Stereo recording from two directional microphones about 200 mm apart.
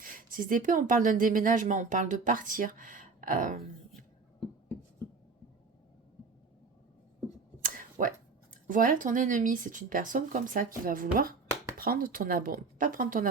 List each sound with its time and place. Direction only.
0.0 s speech: 45° right (ahead or behind)
7.6 s a sound: 40° right (ahead or behind)
8.6 s speech: 40° right (ahead or behind)